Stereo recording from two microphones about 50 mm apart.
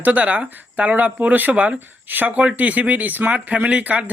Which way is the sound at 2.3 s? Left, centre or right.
Right.